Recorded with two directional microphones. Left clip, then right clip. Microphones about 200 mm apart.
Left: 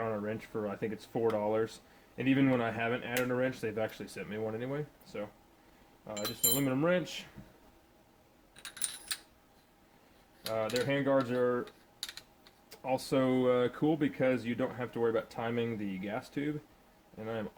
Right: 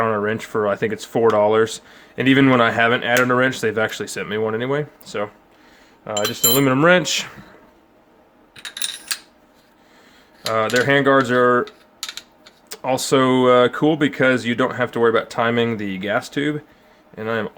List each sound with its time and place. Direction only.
0.0 s speech: 35° right (ahead or behind)
6.6 s speech: 45° right (ahead or behind)
10.5 s speech: 40° right (ahead or behind)
12.6 s speech: 35° right (ahead or behind)